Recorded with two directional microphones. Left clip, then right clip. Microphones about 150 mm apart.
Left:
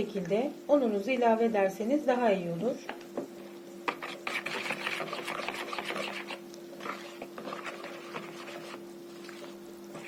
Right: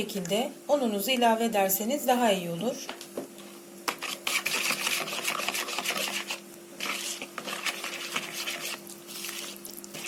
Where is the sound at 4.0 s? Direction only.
Centre (ahead or behind).